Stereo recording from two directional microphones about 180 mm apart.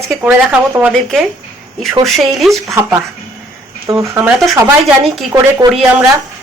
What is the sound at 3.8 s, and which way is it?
Speech, 15° right (ahead or behind).